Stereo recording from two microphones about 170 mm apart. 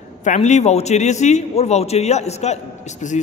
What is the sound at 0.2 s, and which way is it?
A man's voice, 45° left (ahead or behind).